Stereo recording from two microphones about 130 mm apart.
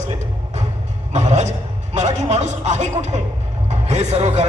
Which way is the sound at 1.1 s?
60° right (ahead or behind).